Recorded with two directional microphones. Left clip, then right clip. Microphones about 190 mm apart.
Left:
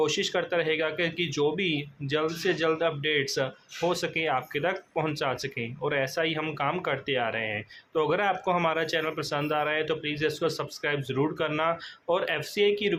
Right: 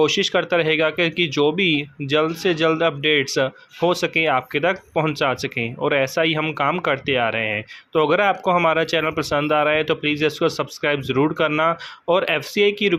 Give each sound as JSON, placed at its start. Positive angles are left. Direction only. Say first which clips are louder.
{"t": 0.0, "sound": "speech", "louder": "right 8 dB", "side_deg": -35}